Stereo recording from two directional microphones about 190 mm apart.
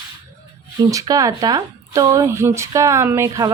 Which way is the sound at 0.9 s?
15° right (ahead or behind).